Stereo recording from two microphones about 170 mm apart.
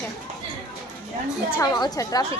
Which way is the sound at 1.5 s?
20° left (ahead or behind).